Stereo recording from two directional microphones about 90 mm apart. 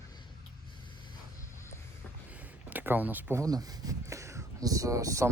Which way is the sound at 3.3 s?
40° right (ahead or behind).